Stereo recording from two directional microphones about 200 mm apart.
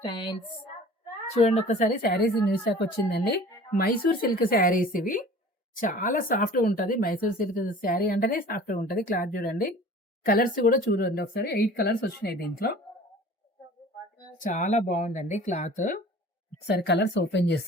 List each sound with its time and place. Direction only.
0.0 s speech: 25° left (ahead or behind)
1.4 s speech: 35° left (ahead or behind); by 12.7 s 50° left (ahead or behind)
14.3 s speech: 40° left (ahead or behind)
16.6 s speech: 55° left (ahead or behind)